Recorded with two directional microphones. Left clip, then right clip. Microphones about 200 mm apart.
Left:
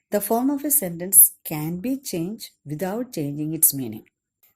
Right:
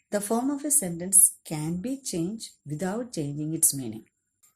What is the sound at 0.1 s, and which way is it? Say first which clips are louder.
Speech: left 5 dB; 45° left (ahead or behind).